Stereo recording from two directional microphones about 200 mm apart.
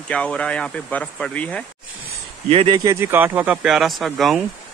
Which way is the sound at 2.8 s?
15° right (ahead or behind).